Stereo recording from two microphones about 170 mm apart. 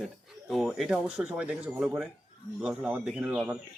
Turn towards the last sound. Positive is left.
turn(degrees=-5)  # may be behind; listen again after turning